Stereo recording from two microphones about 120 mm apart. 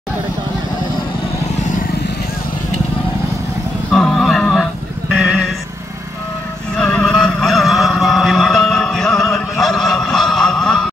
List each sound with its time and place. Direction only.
3.9 s a sound: 5° left (ahead or behind)
5.1 s horse: 5° right (ahead or behind)
6.8 s vehicle: 5° left (ahead or behind)